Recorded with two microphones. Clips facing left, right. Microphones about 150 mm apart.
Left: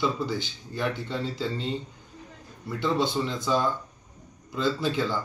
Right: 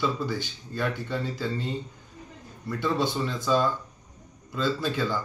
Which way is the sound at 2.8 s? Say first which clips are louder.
Left 1 dB; 20° left (ahead or behind).